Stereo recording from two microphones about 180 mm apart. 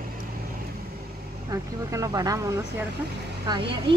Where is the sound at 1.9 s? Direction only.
20° right (ahead or behind).